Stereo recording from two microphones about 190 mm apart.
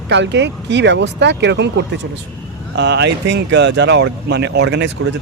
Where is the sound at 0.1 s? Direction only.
65° right (ahead or behind).